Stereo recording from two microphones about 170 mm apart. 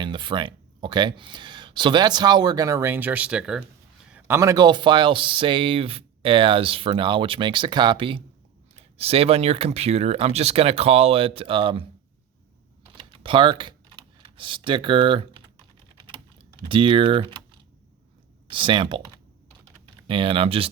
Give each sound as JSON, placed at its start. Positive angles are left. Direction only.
{"t": 0.0, "sound": "speech", "side_deg": -30}
{"t": 13.0, "sound": "computer keyboard", "side_deg": -30}
{"t": 16.6, "sound": "speech", "side_deg": -30}
{"t": 18.4, "sound": "speech", "side_deg": -30}